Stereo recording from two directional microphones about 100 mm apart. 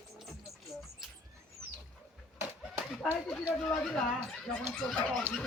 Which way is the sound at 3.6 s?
5° left (ahead or behind).